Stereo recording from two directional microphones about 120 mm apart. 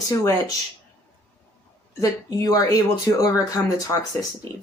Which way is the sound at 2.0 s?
30° left (ahead or behind).